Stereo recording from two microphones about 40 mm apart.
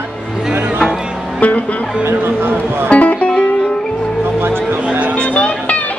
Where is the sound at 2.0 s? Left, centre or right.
Right.